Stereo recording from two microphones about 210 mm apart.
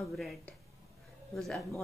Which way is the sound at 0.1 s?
Centre (ahead or behind).